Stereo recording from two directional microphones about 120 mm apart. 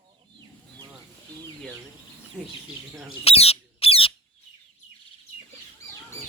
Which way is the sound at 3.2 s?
55° left (ahead or behind).